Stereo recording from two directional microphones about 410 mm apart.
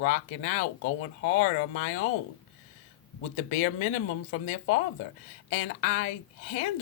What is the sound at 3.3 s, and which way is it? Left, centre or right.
Speech, centre.